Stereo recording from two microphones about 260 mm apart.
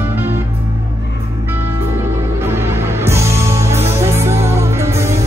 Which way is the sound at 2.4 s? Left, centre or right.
Centre.